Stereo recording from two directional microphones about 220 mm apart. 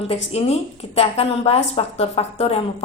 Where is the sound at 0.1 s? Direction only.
30° left (ahead or behind).